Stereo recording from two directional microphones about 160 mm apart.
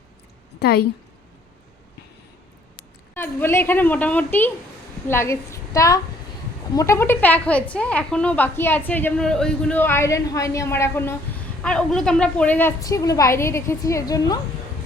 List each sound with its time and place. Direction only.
0.6 s a woman's voice: 80° left
3.2 s a woman's voice: 15° left (ahead or behind)
12.8 s a woman's voice: 20° left (ahead or behind)